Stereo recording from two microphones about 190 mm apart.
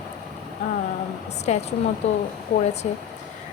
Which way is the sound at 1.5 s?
35° left (ahead or behind).